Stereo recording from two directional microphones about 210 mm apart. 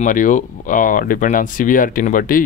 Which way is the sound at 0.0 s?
40° left (ahead or behind).